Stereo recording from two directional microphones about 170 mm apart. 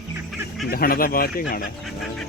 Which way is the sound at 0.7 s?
60° left (ahead or behind).